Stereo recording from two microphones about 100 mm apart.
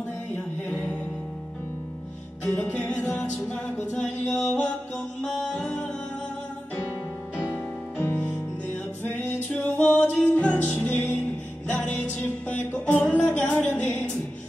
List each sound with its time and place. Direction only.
3.1 s music: 20° left (ahead or behind)
3.4 s music: 10° left (ahead or behind)
7.3 s music: 15° left (ahead or behind)
9.5 s music: 15° left (ahead or behind)